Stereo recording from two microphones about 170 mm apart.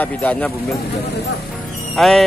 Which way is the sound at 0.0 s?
10° left (ahead or behind).